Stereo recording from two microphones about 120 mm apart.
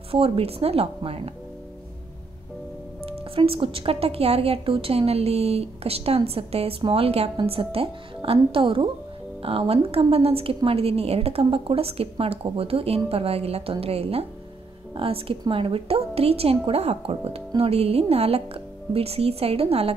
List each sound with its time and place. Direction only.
0.1 s a woman's voice: 55° right (ahead or behind)
3.1 s a woman's voice: 50° right (ahead or behind)